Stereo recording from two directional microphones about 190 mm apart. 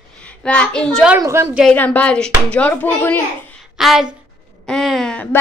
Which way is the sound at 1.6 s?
5° left (ahead or behind).